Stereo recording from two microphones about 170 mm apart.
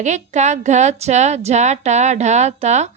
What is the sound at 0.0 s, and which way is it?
A woman's voice, 45° right (ahead or behind).